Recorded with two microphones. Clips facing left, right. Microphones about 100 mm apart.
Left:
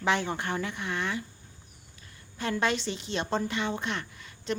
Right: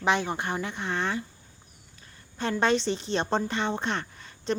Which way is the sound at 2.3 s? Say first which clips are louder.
Right 4 dB; 30° right (ahead or behind).